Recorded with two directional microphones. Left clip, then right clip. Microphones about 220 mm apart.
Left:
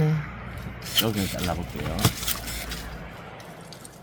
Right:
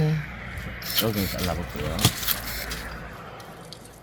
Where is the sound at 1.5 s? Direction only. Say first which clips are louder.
Right 1 dB; 25° right (ahead or behind).